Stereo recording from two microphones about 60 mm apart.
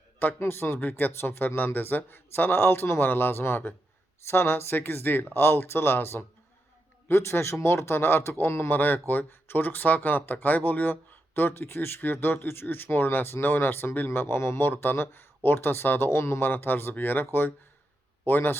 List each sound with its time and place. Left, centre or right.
0.3 s a man's voice: left
8.7 s speech: left
14.7 s speech: left
16.5 s speech: left
18.3 s speech: left